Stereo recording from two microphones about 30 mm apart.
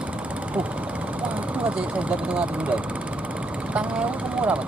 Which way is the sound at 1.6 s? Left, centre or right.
Right.